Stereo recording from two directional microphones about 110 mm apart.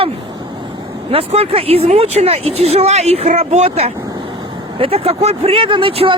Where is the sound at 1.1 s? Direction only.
65° right (ahead or behind).